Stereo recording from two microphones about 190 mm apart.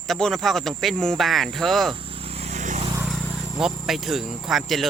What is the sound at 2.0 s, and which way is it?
Vehicle, 30° right (ahead or behind).